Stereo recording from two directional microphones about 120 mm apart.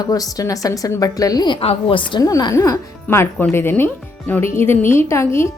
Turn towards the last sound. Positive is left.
turn(degrees=25)  # may be behind; listen again after turning